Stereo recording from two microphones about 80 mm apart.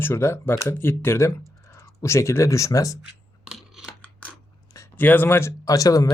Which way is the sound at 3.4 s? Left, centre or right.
Centre.